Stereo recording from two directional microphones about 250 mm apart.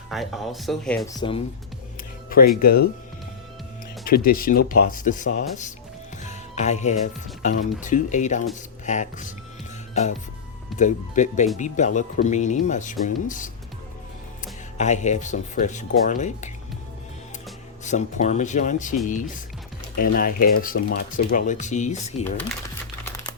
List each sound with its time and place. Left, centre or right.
0.1 s speech: centre
1.0 s speech: centre
2.6 s speech: left
4.0 s speech: left
10.8 s speech: left
17.8 s speech: left